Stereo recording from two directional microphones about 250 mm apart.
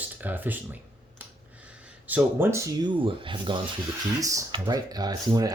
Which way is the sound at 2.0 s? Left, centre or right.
Centre.